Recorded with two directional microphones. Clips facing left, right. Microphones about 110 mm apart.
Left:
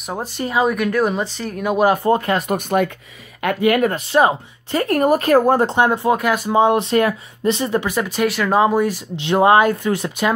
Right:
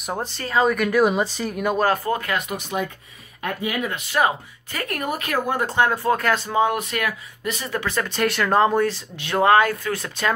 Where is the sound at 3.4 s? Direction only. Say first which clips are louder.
Left 10 dB; 65° left (ahead or behind).